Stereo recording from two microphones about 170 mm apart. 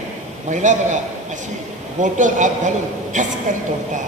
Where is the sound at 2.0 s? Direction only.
45° right (ahead or behind).